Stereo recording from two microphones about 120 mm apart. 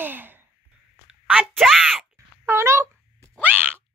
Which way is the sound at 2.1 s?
20° right (ahead or behind).